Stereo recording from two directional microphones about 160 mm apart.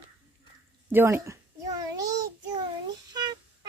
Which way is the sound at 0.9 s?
15° right (ahead or behind).